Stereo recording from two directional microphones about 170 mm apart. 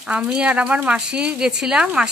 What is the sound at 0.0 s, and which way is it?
A woman's voice, 5° right (ahead or behind).